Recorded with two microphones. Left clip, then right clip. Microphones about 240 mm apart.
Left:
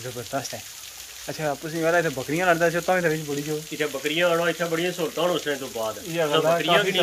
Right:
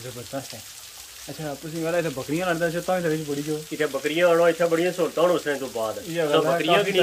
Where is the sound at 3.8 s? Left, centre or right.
Centre.